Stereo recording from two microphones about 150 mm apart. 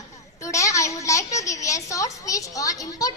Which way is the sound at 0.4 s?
20° left (ahead or behind).